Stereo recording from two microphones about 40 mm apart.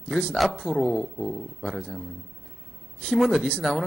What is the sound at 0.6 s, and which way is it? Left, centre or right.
Speech, centre.